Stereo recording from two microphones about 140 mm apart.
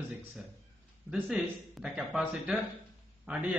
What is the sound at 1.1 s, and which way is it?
A man's voice, 5° right (ahead or behind).